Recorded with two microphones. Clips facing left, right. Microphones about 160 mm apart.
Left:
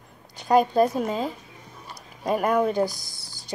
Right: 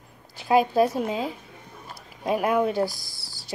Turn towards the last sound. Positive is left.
turn(degrees=0)  # may be behind; listen again after turning